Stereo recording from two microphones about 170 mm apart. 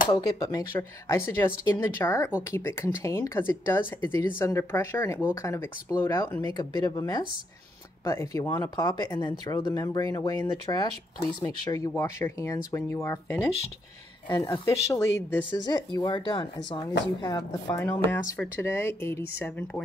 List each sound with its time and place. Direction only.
0.1 s speech: 20° left (ahead or behind)